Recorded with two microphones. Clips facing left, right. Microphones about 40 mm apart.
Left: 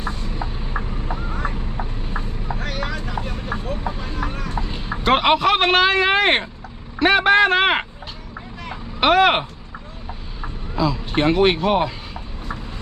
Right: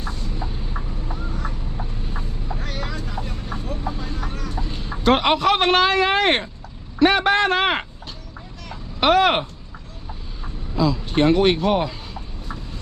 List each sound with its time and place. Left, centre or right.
0.0 s vehicle: left
0.8 s vehicle: left
2.6 s vehicle: left
4.2 s vehicle: left
4.6 s a man's voice: centre
9.0 s speech: centre
10.8 s vehicle: centre